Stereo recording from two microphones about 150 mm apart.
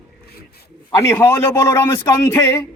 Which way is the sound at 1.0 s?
20° left (ahead or behind).